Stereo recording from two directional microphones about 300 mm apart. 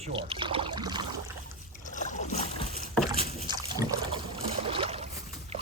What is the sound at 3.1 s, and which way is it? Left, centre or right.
Rowboat, centre.